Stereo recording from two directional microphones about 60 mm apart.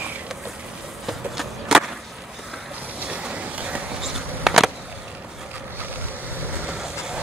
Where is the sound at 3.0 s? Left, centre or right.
Centre.